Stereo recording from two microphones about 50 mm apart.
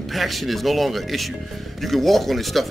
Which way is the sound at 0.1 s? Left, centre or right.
Centre.